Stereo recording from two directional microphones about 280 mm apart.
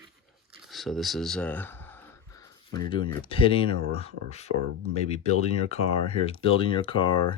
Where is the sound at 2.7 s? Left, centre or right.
Centre.